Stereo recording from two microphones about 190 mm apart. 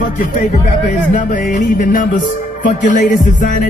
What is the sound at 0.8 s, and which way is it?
Music, 45° left (ahead or behind).